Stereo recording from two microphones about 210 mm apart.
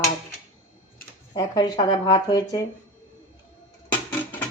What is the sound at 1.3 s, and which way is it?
Speech, 20° left (ahead or behind).